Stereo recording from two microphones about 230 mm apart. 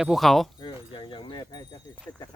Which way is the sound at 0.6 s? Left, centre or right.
Left.